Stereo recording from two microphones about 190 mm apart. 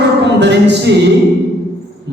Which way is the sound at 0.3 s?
65° right (ahead or behind).